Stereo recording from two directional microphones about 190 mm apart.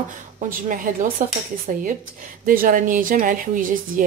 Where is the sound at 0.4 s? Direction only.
45° right (ahead or behind).